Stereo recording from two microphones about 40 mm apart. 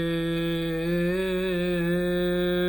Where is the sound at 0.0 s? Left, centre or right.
Centre.